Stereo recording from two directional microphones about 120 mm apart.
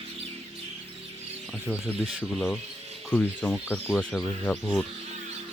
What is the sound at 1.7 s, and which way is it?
Speech, 15° right (ahead or behind).